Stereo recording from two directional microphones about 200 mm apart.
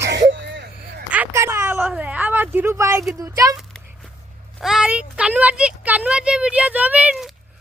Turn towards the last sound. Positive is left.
turn(degrees=-5)  # may be behind; listen again after turning